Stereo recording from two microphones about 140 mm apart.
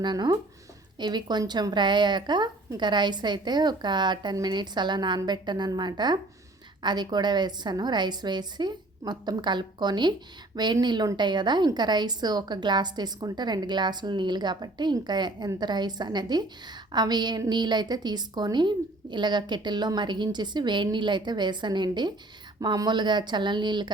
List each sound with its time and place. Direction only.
0.0 s a woman's voice: 30° right (ahead or behind)